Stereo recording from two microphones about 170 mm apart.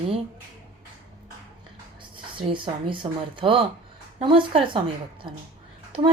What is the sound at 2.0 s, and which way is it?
A woman's voice, 30° right (ahead or behind).